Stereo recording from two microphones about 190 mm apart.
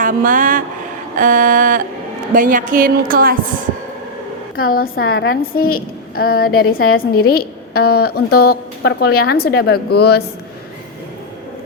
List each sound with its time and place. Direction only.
0.0 s a woman's voice: 45° right (ahead or behind)
4.5 s a woman's voice: 50° left (ahead or behind)